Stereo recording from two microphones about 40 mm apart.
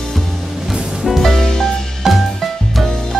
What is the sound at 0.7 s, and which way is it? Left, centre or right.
Music, centre.